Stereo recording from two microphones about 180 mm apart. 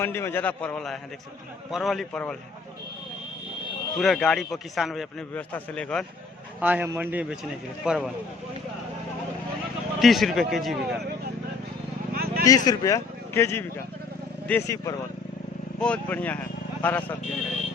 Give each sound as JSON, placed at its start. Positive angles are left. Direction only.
{"t": 0.0, "sound": "a man's voice", "side_deg": 15}
{"t": 3.9, "sound": "a man's voice", "side_deg": 0}
{"t": 6.6, "sound": "a man's voice", "side_deg": -10}
{"t": 10.0, "sound": "a man's voice", "side_deg": 0}
{"t": 12.1, "sound": "vehicle", "side_deg": -55}
{"t": 12.5, "sound": "speech", "side_deg": 20}